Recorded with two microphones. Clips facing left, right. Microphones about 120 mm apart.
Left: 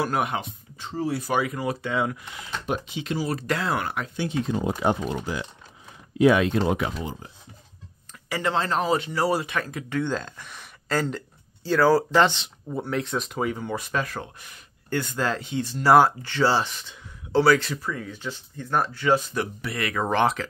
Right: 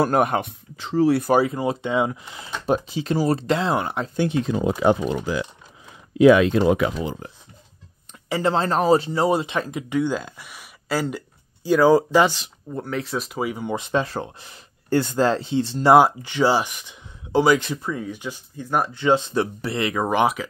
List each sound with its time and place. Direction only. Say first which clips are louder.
0.0 s speech: right 6 dB; 45° right (ahead or behind)
0.5 s speech: right 7 dB; 90° right
1.4 s speech: right 5 dB; 25° right (ahead or behind)
3.4 s speech: right 4 dB; 25° right (ahead or behind)
4.8 s speech: right 7 dB; 90° right
8.3 s speech: right 4 dB; 30° right (ahead or behind)
9.2 s speech: right 4 dB; 20° right (ahead or behind)
13.7 s speech: right 5 dB; 25° right (ahead or behind)